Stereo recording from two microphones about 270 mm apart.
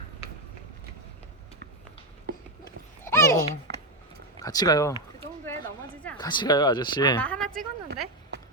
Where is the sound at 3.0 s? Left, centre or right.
Centre.